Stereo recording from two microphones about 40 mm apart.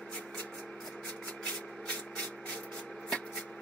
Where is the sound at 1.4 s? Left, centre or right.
Left.